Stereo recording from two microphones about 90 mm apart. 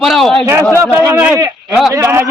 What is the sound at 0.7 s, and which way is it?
Speech, 30° right (ahead or behind).